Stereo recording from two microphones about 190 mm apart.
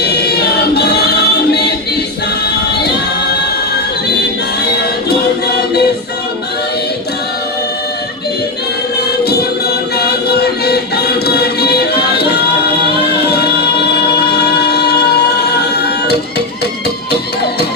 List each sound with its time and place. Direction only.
0.0 s choir: 60° left (ahead or behind)
4.8 s music: 60° left (ahead or behind)
9.2 s music: 55° left (ahead or behind)